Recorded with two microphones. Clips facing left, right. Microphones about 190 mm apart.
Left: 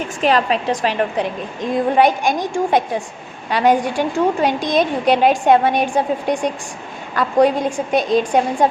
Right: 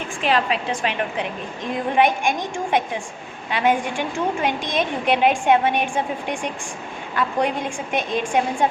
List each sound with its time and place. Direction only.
0.2 s a woman's voice: 40° left (ahead or behind)